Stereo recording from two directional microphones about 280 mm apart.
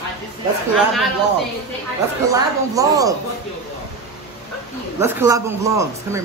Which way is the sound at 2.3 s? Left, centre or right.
Centre.